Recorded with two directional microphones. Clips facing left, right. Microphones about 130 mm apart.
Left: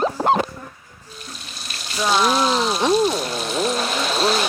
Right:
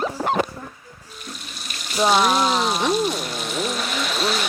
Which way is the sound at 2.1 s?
35° left (ahead or behind).